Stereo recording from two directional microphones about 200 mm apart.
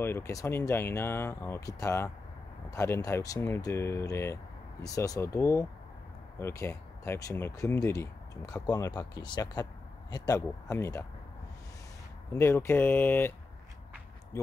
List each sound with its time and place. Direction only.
0.0 s speech: 15° left (ahead or behind)
12.3 s speech: 10° left (ahead or behind)
14.3 s speech: 15° left (ahead or behind)